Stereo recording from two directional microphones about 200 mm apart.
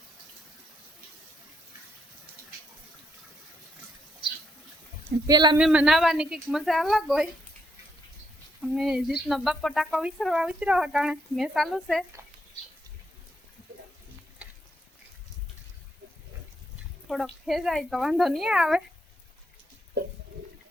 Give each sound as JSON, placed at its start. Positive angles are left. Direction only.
{"t": 5.2, "sound": "speech", "side_deg": -20}
{"t": 5.5, "sound": "speech", "side_deg": -5}
{"t": 8.6, "sound": "speech", "side_deg": 0}
{"t": 17.1, "sound": "speech", "side_deg": 0}